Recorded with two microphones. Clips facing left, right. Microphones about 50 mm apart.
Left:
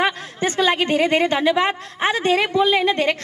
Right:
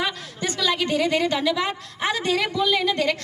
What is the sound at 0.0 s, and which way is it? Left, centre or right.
A woman's voice, left.